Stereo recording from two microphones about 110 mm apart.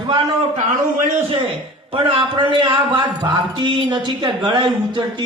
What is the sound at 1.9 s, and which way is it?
Speech, 50° right (ahead or behind).